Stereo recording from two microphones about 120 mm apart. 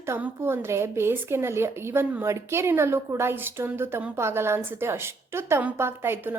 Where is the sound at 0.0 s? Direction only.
20° right (ahead or behind).